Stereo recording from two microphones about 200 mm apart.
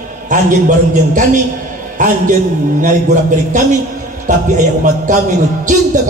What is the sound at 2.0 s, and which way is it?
A man's voice, 40° right (ahead or behind).